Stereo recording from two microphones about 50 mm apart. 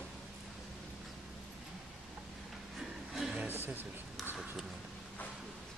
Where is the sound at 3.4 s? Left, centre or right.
Right.